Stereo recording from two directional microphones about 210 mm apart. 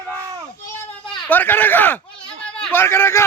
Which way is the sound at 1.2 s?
10° left (ahead or behind).